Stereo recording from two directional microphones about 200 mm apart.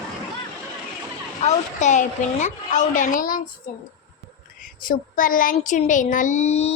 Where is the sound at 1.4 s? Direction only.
35° left (ahead or behind).